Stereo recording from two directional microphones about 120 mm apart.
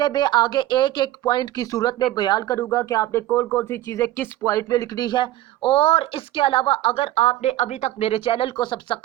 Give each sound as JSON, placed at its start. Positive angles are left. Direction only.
{"t": 0.0, "sound": "speech", "side_deg": 40}
{"t": 2.6, "sound": "speech", "side_deg": 25}